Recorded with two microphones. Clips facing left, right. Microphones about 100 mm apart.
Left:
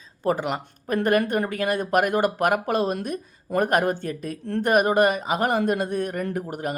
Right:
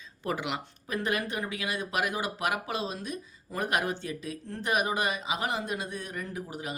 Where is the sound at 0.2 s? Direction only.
40° left (ahead or behind).